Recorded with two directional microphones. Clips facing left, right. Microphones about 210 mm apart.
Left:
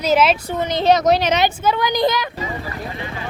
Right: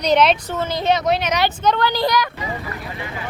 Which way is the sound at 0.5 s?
15° left (ahead or behind).